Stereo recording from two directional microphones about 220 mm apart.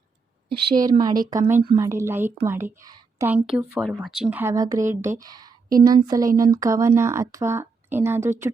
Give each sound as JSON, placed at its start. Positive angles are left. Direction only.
{"t": 0.8, "sound": "speech", "side_deg": -15}